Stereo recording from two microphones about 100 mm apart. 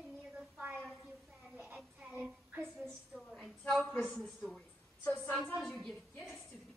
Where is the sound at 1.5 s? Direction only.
20° right (ahead or behind).